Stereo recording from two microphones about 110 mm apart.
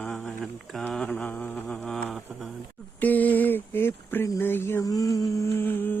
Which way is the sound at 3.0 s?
15° left (ahead or behind).